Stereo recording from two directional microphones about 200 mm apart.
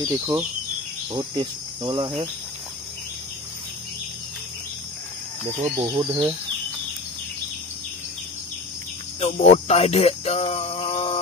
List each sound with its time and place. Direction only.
0.0 s speech: 10° right (ahead or behind)
1.1 s cricket: 25° right (ahead or behind)
5.4 s speech: 15° right (ahead or behind)
9.2 s music: 30° left (ahead or behind)